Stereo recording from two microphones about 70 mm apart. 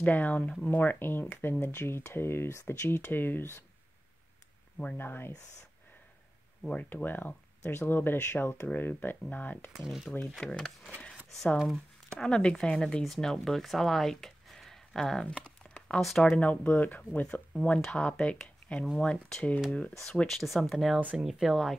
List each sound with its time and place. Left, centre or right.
0.0 s speech: left
4.9 s speech: left
6.6 s speech: centre
9.7 s speech: centre
10.4 s speech: centre
16.3 s speech: left
18.1 s speech: centre